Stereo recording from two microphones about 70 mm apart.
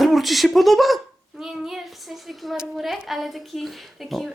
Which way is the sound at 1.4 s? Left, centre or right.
Centre.